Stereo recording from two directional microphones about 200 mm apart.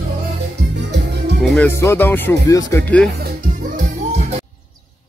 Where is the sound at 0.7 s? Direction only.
60° right (ahead or behind).